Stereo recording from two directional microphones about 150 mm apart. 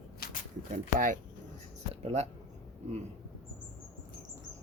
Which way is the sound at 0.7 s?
60° right (ahead or behind).